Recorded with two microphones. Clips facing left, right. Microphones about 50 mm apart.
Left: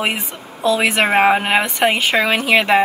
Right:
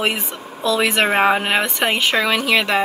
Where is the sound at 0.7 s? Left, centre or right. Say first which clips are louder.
Left 2 dB; left.